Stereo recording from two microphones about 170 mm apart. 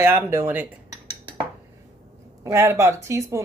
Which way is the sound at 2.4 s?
15° right (ahead or behind).